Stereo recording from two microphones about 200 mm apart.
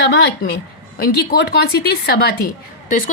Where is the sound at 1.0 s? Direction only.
50° left (ahead or behind).